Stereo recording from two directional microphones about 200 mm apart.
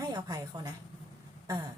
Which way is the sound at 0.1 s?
20° right (ahead or behind).